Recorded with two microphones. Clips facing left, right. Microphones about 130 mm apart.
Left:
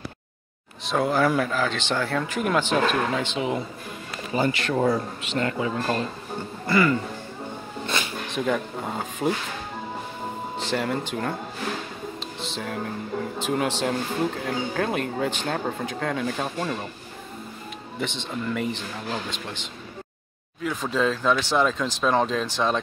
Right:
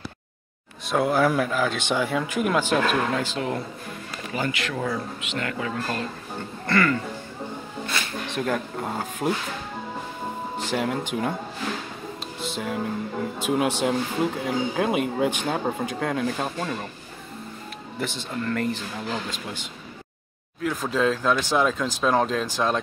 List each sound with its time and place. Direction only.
0.8 s speech: 5° right (ahead or behind)
4.3 s speech: 35° left (ahead or behind)
6.6 s speech: 5° left (ahead or behind)
7.8 s a sound: 20° left (ahead or behind)
8.3 s speech: centre (ahead or behind)
10.6 s a sound: 10° right (ahead or behind)
11.1 s speech: 5° right (ahead or behind)
12.5 s speech: 5° right (ahead or behind)
18.0 s speech: 5° right (ahead or behind)
18.4 s speech: 5° left (ahead or behind)
20.6 s speech: 10° right (ahead or behind)